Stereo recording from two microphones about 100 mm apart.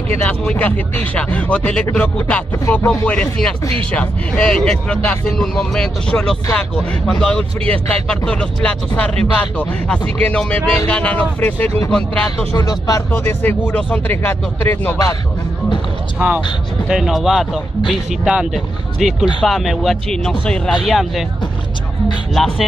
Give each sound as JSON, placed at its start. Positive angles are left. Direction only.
{"t": 0.2, "sound": "speech", "side_deg": 15}
{"t": 12.5, "sound": "speech", "side_deg": 40}
{"t": 13.1, "sound": "speech", "side_deg": 20}
{"t": 16.2, "sound": "speech", "side_deg": -15}
{"t": 16.8, "sound": "speech", "side_deg": 0}
{"t": 22.3, "sound": "speech", "side_deg": 0}